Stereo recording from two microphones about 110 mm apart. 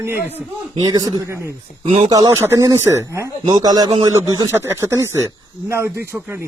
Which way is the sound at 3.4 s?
40° right (ahead or behind).